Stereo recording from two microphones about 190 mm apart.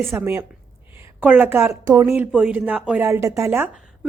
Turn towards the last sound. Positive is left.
turn(degrees=-15)  # may be behind; listen again after turning